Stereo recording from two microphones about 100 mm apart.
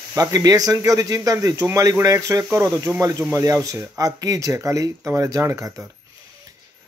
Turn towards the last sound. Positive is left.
turn(degrees=-30)  # may be behind; listen again after turning